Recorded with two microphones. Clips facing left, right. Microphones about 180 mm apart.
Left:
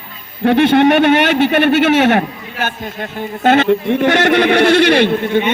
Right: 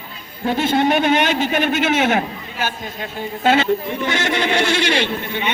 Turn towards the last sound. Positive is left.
turn(degrees=55)  # may be behind; listen again after turning